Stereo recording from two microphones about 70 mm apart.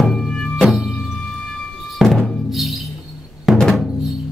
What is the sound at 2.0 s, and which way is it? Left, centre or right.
Music, centre.